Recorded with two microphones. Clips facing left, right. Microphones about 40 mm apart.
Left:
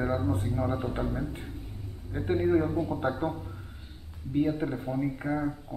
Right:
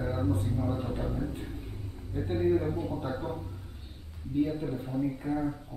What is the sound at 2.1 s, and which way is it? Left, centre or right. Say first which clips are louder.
A man's voice: left 2 dB; left.